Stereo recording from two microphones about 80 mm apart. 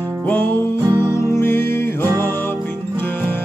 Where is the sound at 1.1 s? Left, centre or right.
Left.